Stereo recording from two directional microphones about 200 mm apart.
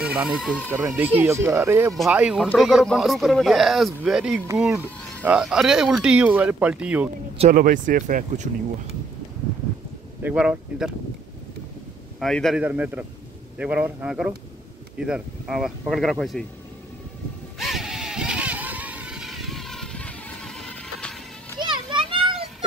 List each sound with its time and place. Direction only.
0.0 s speech: 5° right (ahead or behind)
7.3 s speech: 40° right (ahead or behind)
10.2 s speech: 5° right (ahead or behind)
12.2 s speech: centre (ahead or behind)
17.6 s vehicle: centre (ahead or behind)
21.5 s children playing: 25° right (ahead or behind)